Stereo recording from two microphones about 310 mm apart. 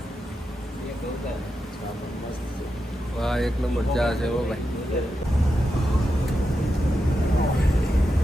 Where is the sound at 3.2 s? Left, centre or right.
Centre.